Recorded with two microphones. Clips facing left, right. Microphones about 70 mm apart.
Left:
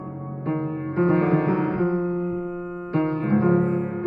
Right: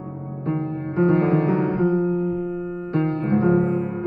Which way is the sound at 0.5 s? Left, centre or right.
Left.